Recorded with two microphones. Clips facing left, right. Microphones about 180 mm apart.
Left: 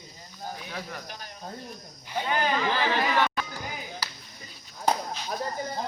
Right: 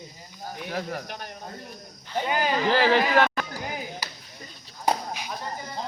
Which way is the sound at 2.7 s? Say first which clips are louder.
Right 6 dB; 90° right.